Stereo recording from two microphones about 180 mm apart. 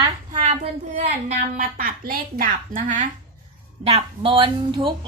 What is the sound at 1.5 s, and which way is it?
Speech, 55° right (ahead or behind).